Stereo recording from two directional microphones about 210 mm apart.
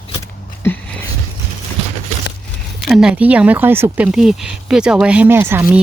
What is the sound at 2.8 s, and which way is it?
Speech, centre (ahead or behind).